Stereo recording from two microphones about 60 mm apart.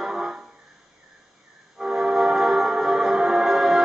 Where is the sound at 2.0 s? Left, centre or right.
Centre.